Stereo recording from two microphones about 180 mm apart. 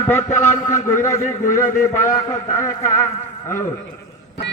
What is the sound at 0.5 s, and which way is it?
Speech, 45° left (ahead or behind).